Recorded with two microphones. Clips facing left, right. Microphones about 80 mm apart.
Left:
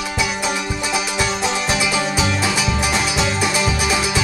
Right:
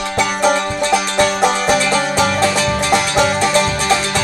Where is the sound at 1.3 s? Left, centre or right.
Right.